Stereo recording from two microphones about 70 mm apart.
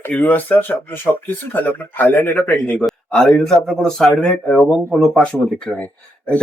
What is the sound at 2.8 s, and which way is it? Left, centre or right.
A man's voice, centre.